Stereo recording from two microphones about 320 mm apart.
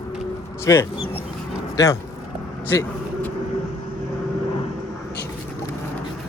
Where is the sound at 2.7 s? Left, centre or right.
Centre.